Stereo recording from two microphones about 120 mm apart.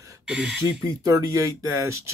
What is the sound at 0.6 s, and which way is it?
Speech, 30° right (ahead or behind).